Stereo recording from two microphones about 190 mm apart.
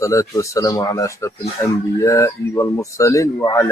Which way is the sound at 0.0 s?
15° left (ahead or behind).